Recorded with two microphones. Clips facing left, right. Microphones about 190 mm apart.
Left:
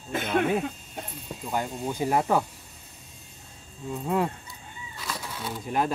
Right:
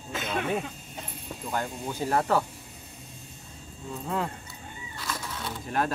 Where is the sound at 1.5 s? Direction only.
15° left (ahead or behind).